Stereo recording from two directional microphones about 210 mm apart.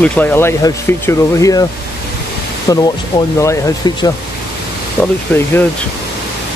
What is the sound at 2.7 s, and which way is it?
Speech, 15° left (ahead or behind).